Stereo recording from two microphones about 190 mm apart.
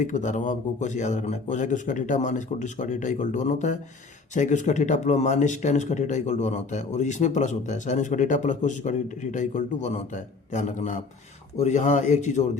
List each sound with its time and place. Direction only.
0.0 s speech: 40° left (ahead or behind)